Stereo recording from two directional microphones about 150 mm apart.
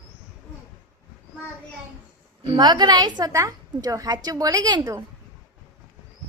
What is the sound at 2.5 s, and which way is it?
A woman's voice, 30° right (ahead or behind).